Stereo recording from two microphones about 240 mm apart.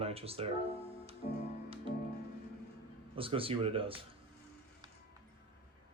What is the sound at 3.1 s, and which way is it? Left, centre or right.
Speech, right.